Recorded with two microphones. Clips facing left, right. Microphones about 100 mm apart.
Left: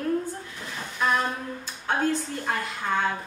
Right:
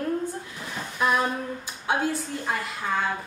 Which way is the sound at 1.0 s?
15° right (ahead or behind).